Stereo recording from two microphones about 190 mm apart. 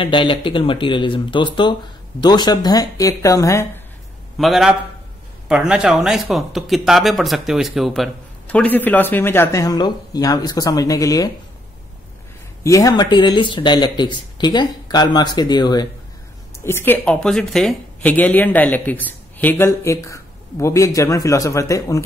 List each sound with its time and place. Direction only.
0.0 s speech: 25° left (ahead or behind)
4.4 s a man's voice: centre (ahead or behind); by 11.3 s 20° left (ahead or behind)
12.6 s speech: 15° left (ahead or behind)